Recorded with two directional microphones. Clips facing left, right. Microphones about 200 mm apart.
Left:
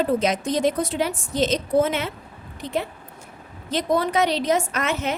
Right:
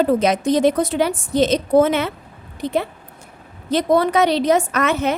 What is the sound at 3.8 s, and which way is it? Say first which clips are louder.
A woman's voice: right 5 dB; 65° right (ahead or behind).